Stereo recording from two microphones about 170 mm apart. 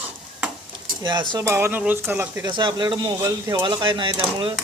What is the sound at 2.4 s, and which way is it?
Speech, 25° right (ahead or behind).